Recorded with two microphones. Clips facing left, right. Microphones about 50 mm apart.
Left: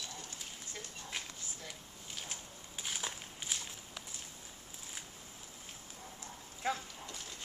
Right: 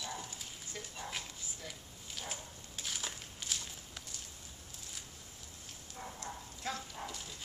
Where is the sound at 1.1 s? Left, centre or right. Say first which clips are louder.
Left 1 dB; centre.